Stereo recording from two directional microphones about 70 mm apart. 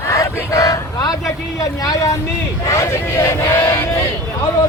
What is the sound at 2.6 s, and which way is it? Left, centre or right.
Speech, left.